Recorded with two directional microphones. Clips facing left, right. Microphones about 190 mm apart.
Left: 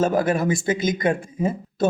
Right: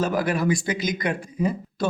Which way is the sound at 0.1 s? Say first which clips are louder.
Left 2 dB; 25° left (ahead or behind).